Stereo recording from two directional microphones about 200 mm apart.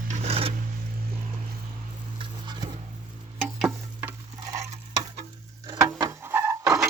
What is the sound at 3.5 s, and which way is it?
Stir, 5° right (ahead or behind).